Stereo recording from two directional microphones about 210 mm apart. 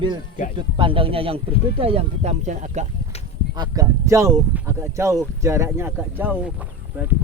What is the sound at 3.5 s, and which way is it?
Speech, 20° right (ahead or behind).